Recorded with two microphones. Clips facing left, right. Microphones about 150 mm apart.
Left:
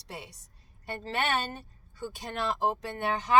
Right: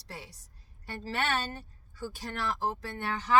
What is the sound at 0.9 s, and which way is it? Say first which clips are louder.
Speech: left 2 dB; 20° left (ahead or behind).